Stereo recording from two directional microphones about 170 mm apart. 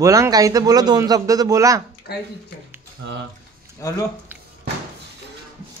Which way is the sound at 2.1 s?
65° left (ahead or behind).